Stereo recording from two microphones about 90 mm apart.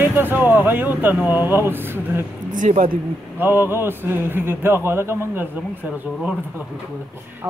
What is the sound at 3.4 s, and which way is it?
Speech, 25° right (ahead or behind).